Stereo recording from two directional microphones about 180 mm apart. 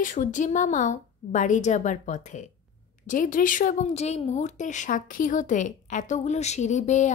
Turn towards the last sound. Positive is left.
turn(degrees=40)  # may be behind; listen again after turning